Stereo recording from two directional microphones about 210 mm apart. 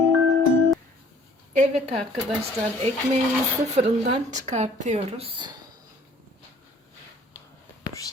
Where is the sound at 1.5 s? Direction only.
30° right (ahead or behind).